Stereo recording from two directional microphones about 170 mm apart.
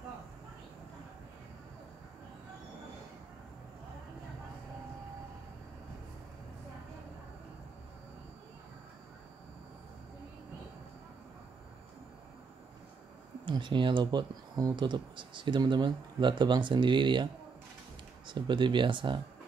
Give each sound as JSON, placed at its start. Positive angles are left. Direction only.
{"t": 13.5, "sound": "speech", "side_deg": -30}